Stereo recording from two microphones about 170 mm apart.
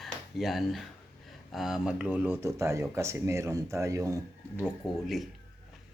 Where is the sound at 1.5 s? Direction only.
Centre (ahead or behind); by 4.1 s 20° right (ahead or behind).